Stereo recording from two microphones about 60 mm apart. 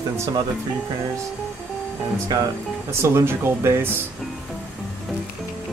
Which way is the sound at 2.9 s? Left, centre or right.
Right.